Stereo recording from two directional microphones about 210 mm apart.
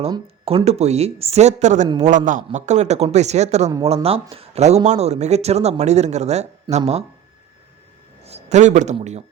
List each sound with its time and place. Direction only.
0.1 s speech: 25° right (ahead or behind)
8.2 s a man's voice: 30° right (ahead or behind)